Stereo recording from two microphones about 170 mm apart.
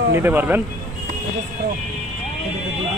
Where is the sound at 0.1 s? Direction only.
10° right (ahead or behind).